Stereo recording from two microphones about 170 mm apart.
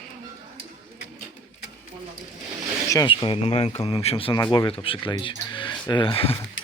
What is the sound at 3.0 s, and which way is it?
Speech, 30° left (ahead or behind).